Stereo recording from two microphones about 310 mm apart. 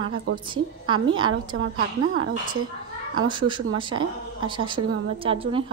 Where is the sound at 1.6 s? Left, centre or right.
Right.